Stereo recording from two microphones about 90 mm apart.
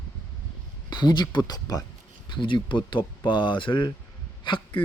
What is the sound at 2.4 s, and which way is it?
Speech, 65° left (ahead or behind).